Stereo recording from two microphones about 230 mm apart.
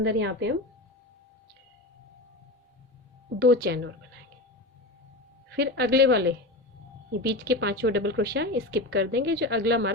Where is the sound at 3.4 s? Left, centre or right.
Right.